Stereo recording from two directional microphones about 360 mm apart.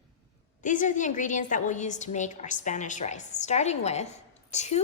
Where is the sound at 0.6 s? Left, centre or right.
Left.